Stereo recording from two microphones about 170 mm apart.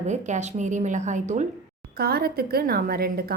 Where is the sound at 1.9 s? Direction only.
65° right (ahead or behind).